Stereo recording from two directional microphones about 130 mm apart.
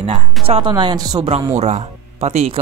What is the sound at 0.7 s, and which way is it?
Speech, 35° right (ahead or behind).